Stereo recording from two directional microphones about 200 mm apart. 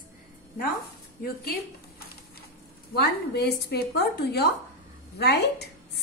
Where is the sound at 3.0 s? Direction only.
55° left (ahead or behind).